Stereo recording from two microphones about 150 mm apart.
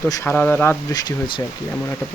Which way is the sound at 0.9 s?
30° left (ahead or behind).